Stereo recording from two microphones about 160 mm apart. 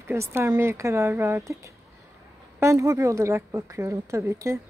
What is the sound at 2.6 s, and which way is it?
A woman's voice, 20° right (ahead or behind).